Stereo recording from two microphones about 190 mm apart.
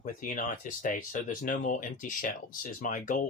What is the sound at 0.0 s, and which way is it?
Speech, 45° left (ahead or behind).